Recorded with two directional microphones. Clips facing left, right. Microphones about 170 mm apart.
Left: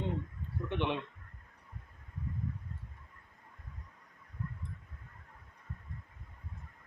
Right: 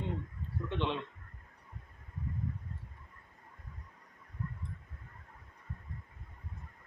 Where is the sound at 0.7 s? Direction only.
15° left (ahead or behind).